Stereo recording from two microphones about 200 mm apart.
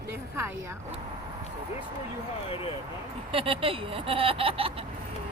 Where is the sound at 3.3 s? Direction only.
25° right (ahead or behind).